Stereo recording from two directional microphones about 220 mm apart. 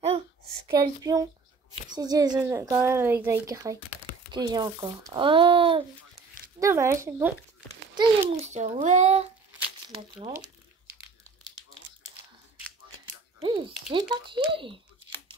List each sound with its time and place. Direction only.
0.7 s speech: 15° right (ahead or behind)
6.6 s speech: 10° right (ahead or behind)
7.9 s a child's voice: 20° right (ahead or behind)
13.4 s speech: 20° right (ahead or behind)